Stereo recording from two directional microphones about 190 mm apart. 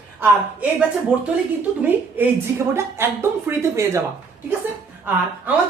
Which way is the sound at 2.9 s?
15° right (ahead or behind).